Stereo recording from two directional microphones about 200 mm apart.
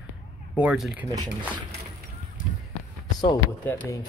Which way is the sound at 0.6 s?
5° right (ahead or behind).